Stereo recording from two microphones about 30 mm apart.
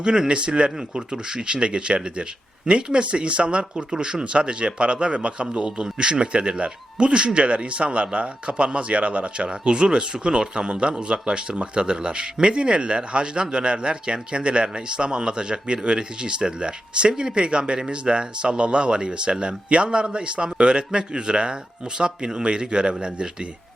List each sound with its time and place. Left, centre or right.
0.0 s speech: right
3.9 s speech: right
4.2 s speech: right
9.5 s speech: right